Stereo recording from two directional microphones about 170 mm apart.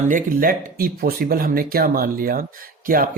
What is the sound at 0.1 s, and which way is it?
Speech, 55° right (ahead or behind).